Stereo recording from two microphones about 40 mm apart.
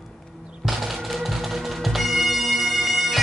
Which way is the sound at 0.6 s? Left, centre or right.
Centre.